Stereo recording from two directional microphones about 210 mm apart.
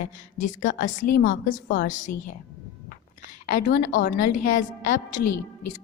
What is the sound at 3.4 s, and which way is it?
A woman's voice, 40° left (ahead or behind).